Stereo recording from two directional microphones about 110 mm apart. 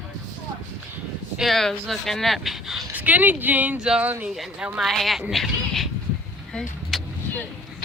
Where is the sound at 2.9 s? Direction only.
15° right (ahead or behind); by 5.2 s centre (ahead or behind).